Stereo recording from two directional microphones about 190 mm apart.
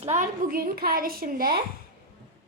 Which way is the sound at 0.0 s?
35° right (ahead or behind).